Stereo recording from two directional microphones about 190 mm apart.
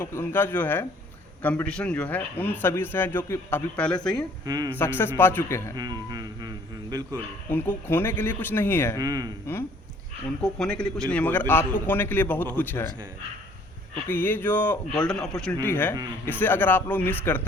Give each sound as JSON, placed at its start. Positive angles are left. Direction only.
{"t": 0.0, "sound": "a man's voice", "side_deg": 10}
{"t": 4.4, "sound": "music", "side_deg": -20}
{"t": 4.7, "sound": "a man's voice", "side_deg": 10}
{"t": 5.7, "sound": "music", "side_deg": -20}
{"t": 7.5, "sound": "a man's voice", "side_deg": 10}
{"t": 9.0, "sound": "music", "side_deg": -20}
{"t": 10.4, "sound": "a man's voice", "side_deg": 5}
{"t": 14.1, "sound": "a man's voice", "side_deg": 10}